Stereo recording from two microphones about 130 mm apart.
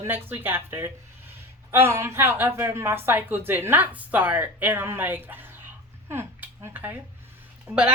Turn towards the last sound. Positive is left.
turn(degrees=-20)  # may be behind; listen again after turning